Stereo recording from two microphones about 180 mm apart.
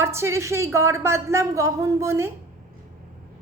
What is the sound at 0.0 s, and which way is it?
Speech, 15° right (ahead or behind).